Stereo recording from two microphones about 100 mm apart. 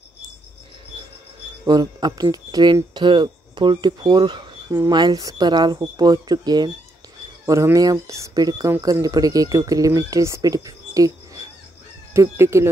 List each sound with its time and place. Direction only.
1.7 s speech: 40° right (ahead or behind)
7.4 s speech: 30° right (ahead or behind)